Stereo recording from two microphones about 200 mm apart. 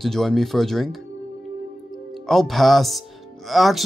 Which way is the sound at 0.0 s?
Centre (ahead or behind).